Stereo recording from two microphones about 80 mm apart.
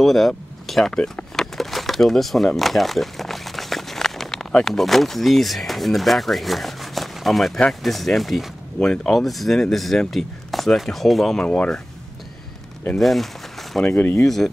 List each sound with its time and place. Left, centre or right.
0.0 s speech: centre
11.4 s speech: centre
12.9 s a sound: centre
13.8 s speech: left
14.2 s speech: centre